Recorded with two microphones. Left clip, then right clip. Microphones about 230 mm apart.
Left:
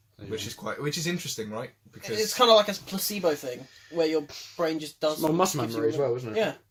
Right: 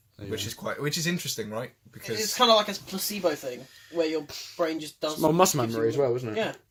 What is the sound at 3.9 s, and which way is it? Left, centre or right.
Speech, left.